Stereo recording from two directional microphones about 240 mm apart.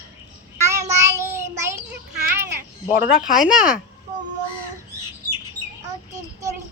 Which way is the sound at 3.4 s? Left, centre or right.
Centre.